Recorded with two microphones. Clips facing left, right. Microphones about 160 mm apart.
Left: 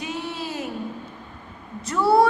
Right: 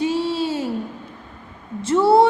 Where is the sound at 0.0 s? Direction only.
30° right (ahead or behind).